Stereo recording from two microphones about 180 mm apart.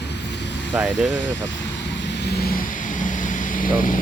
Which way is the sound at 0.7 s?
Centre (ahead or behind).